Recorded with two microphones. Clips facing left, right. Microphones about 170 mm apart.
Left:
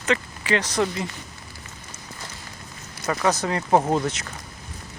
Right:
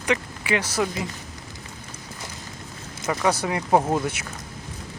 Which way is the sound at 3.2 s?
10° right (ahead or behind).